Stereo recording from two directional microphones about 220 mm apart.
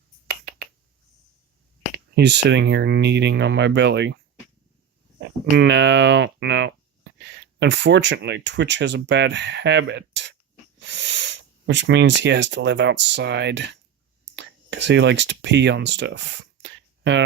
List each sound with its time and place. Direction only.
2.1 s speech: 50° right (ahead or behind)
5.5 s speech: 50° right (ahead or behind)
16.6 s a sound: 55° right (ahead or behind)